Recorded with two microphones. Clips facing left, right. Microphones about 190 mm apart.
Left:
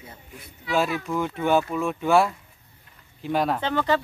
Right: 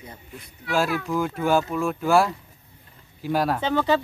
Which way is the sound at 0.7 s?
Centre (ahead or behind).